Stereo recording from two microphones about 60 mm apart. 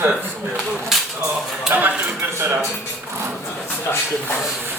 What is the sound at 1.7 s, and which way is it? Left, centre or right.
Speech, right.